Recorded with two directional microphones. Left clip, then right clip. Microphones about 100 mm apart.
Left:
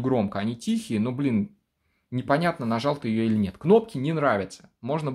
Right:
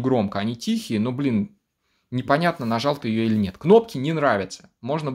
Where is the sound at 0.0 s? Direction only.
15° right (ahead or behind).